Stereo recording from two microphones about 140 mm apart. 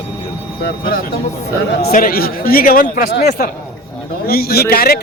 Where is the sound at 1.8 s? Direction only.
90° left.